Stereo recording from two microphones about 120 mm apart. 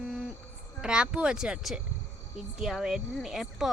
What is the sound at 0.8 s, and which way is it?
Speech, 5° right (ahead or behind).